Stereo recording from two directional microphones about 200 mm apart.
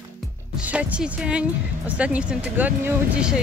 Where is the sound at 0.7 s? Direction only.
5° right (ahead or behind).